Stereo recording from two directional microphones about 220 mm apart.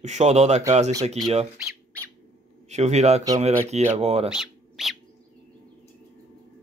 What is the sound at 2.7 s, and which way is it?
Speech, 30° right (ahead or behind).